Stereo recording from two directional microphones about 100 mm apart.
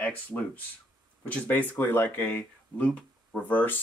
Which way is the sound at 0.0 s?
15° left (ahead or behind).